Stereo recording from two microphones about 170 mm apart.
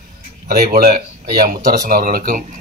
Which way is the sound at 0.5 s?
65° right (ahead or behind).